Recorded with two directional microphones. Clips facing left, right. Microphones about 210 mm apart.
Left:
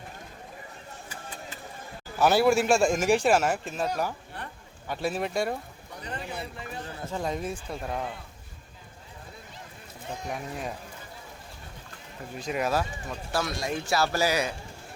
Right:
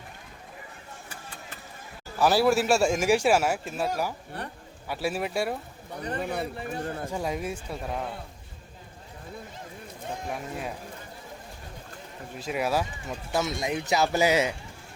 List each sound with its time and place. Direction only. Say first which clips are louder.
2.1 s speech: even; centre (ahead or behind)
6.0 s a man's voice: right 6 dB; 55° right (ahead or behind)
7.1 s speech: left 4 dB; 10° right (ahead or behind)
10.2 s speech: left 1 dB; centre (ahead or behind)
12.4 s speech: even; 5° right (ahead or behind)